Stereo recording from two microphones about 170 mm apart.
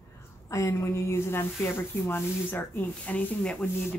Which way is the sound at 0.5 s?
20° left (ahead or behind).